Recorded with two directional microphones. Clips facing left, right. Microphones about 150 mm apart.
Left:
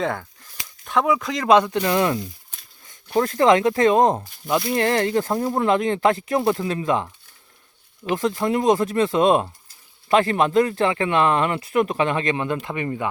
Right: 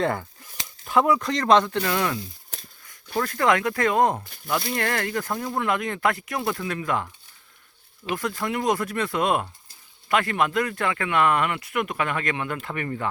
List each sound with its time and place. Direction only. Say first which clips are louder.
0.0 s speech: even; centre (ahead or behind); by 7.1 s 20° left (ahead or behind)
8.1 s speech: left 6 dB; 25° left (ahead or behind)